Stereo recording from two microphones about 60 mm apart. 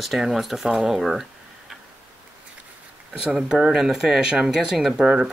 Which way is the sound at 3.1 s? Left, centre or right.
Centre.